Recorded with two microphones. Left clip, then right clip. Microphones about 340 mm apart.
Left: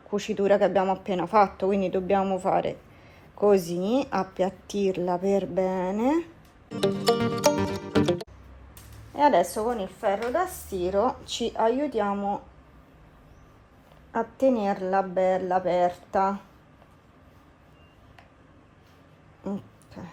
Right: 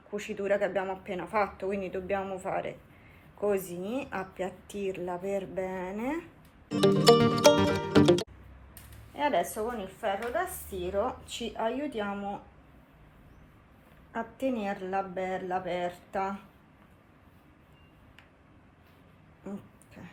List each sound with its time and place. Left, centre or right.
0.3 s speech: left
6.7 s music: centre
9.1 s speech: left
14.1 s speech: centre